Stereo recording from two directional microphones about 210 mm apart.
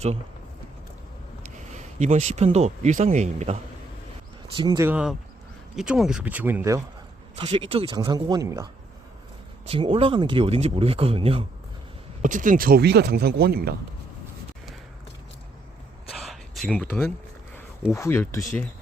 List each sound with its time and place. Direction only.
1.7 s speech: 35° right (ahead or behind)
4.5 s speech: 20° right (ahead or behind)
4.9 s speech: 5° right (ahead or behind)
7.3 s speech: 25° right (ahead or behind)
9.6 s speech: 25° right (ahead or behind)
12.2 s speech: 40° right (ahead or behind)
16.1 s a sound: centre (ahead or behind)
17.9 s speech: 10° left (ahead or behind)